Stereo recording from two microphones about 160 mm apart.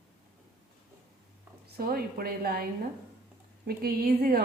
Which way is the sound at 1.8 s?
70° right (ahead or behind).